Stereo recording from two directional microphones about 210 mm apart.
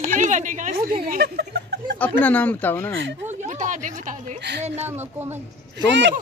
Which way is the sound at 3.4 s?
40° right (ahead or behind).